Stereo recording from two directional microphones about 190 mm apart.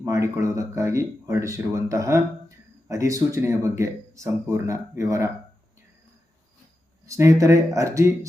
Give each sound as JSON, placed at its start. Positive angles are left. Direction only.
{"t": 0.0, "sound": "speech", "side_deg": -15}
{"t": 7.1, "sound": "speech", "side_deg": -15}